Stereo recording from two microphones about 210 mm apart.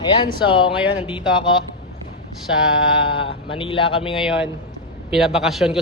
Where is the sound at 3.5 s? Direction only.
25° left (ahead or behind).